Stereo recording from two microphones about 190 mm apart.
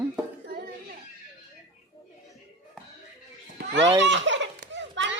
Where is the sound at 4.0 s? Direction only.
70° right (ahead or behind).